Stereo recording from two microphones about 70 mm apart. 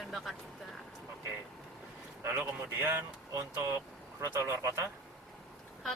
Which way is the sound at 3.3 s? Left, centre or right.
Right.